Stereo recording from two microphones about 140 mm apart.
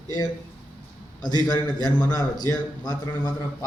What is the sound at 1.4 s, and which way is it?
A man's voice, 30° left (ahead or behind).